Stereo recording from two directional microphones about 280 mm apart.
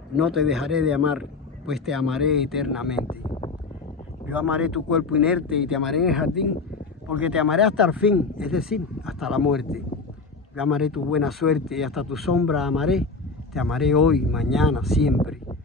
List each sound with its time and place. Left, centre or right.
0.1 s speech: centre
3.3 s a sound: centre
4.3 s speech: centre